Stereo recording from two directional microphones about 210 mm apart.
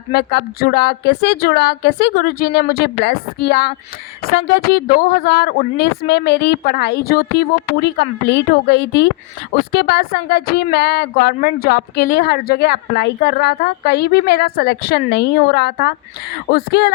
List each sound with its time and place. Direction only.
0.1 s speech: 50° left (ahead or behind)